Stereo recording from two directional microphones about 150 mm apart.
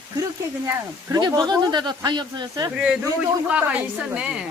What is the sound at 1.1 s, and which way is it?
Speech, 25° right (ahead or behind).